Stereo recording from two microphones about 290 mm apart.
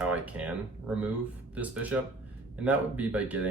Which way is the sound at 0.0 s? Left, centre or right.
Centre.